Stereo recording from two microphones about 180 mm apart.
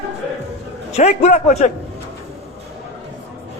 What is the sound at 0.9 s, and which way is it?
Speech, 40° left (ahead or behind).